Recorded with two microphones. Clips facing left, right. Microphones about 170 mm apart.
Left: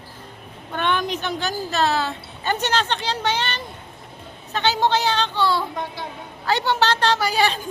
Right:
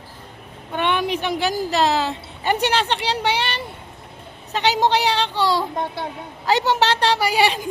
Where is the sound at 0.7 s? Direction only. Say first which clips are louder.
Right 2 dB; 10° right (ahead or behind).